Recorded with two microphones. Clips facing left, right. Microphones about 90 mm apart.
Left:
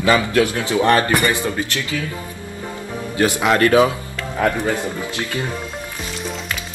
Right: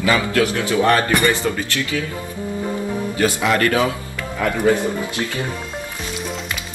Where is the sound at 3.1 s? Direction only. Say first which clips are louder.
Left 3 dB; 20° left (ahead or behind).